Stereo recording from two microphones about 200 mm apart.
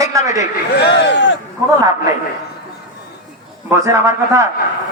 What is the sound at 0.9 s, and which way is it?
Speech, 60° left (ahead or behind).